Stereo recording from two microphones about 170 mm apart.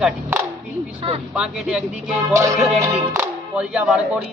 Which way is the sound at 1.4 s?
5° right (ahead or behind).